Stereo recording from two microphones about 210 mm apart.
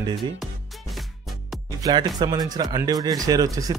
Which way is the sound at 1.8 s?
20° right (ahead or behind).